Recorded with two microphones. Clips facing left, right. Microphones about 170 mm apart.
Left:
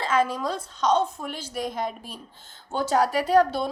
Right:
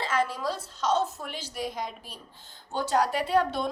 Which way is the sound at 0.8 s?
5° right (ahead or behind).